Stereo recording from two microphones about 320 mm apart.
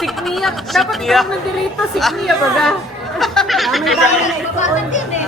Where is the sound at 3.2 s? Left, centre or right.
Centre.